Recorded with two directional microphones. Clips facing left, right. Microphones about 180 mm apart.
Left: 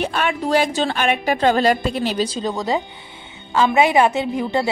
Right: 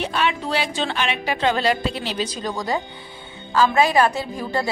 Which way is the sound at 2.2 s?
25° left (ahead or behind).